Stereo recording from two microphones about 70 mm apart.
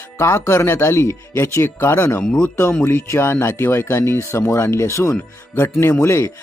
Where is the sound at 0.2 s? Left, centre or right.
Left.